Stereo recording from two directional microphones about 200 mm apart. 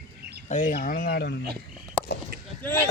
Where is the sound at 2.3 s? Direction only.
50° right (ahead or behind).